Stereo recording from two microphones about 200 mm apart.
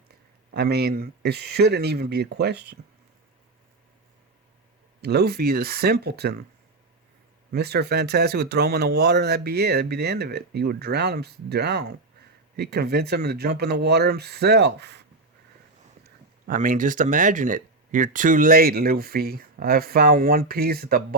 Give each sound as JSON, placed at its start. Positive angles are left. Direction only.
{"t": 0.5, "sound": "speech", "side_deg": -55}
{"t": 4.9, "sound": "speech", "side_deg": -55}
{"t": 7.5, "sound": "speech", "side_deg": -55}
{"t": 16.0, "sound": "speech", "side_deg": -45}